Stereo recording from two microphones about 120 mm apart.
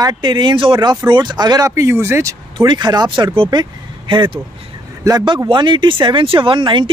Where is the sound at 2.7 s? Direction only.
35° right (ahead or behind).